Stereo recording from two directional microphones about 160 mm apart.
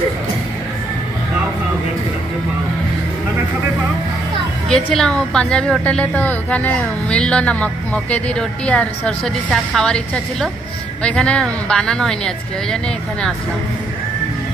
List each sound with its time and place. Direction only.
4.6 s a woman's voice: 5° left (ahead or behind)